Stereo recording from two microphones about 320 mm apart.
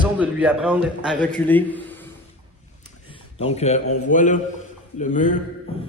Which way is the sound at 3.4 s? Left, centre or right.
Centre.